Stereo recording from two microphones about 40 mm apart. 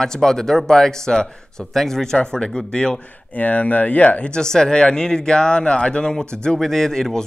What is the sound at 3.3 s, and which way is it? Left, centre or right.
Speech, left.